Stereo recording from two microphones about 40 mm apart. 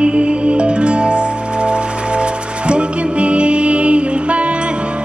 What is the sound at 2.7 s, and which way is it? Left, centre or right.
Music, right.